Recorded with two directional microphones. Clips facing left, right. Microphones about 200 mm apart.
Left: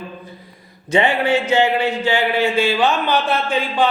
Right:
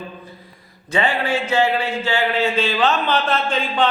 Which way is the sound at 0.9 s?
20° left (ahead or behind).